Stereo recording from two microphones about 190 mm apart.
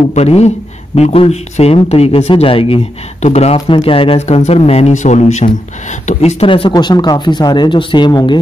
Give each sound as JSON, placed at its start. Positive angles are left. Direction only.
{"t": 0.1, "sound": "speech", "side_deg": 35}